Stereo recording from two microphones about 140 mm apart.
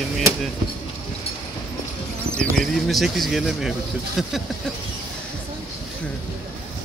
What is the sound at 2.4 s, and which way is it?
Speech, centre (ahead or behind).